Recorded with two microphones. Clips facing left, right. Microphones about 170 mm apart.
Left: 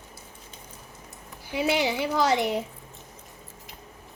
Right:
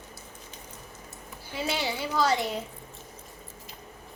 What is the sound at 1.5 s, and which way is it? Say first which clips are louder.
A woman's voice: left 6 dB; 15° left (ahead or behind).